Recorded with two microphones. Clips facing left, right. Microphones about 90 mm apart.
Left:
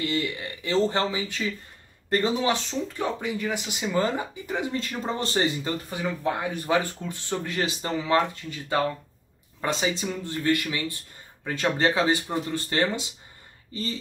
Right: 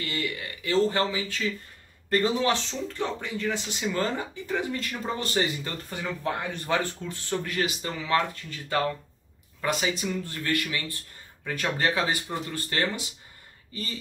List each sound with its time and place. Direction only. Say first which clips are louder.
0.0 s speech: left 4 dB; 25° left (ahead or behind)
3.0 s speech: left 1 dB; 10° left (ahead or behind); by 5.7 s 30° left (ahead or behind)
5.9 s speech: left 1 dB; 10° left (ahead or behind)